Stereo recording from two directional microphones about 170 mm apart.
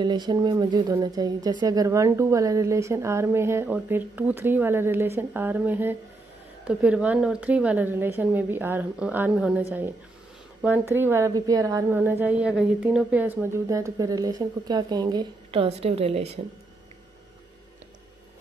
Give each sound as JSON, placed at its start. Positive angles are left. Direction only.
{"t": 0.0, "sound": "a woman's voice", "side_deg": -25}